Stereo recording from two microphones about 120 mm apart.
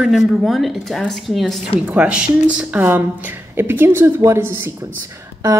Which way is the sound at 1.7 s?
10° right (ahead or behind).